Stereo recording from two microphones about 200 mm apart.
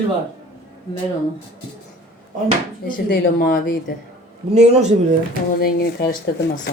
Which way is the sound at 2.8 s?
45° left (ahead or behind).